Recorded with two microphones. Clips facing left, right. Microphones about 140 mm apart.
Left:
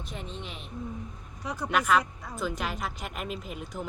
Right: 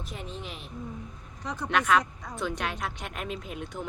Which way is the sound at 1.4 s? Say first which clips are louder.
Even; 10° left (ahead or behind).